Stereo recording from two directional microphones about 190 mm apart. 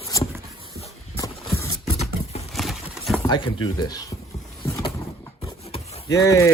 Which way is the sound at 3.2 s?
25° left (ahead or behind).